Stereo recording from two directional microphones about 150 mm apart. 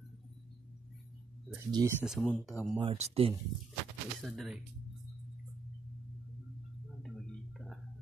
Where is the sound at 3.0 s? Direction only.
40° right (ahead or behind).